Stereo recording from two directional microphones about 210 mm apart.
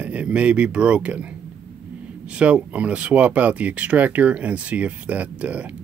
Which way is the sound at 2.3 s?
5° right (ahead or behind).